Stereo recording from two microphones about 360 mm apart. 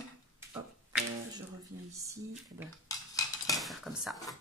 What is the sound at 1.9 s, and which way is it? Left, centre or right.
Speech, centre.